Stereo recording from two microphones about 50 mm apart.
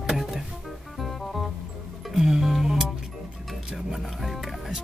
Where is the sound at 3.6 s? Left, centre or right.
Centre.